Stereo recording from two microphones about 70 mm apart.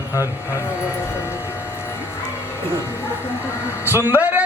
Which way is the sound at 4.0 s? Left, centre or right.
Right.